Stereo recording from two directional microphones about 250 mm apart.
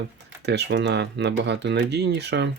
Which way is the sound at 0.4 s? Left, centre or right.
Right.